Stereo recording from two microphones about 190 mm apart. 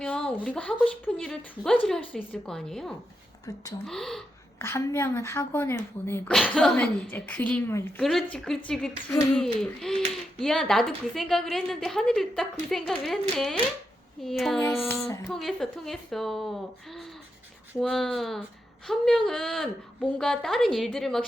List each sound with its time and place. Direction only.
0.0 s speech: 5° left (ahead or behind)
3.4 s speech: 20° left (ahead or behind)
3.8 s speech: centre (ahead or behind)
4.6 s speech: 15° left (ahead or behind)
14.6 s speech: 15° left (ahead or behind)
15.3 s speech: centre (ahead or behind)
17.7 s speech: centre (ahead or behind)